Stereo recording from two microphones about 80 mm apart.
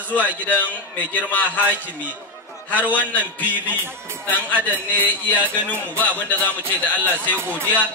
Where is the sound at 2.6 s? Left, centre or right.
Left.